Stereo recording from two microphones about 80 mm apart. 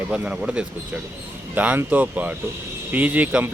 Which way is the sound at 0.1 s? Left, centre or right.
Centre.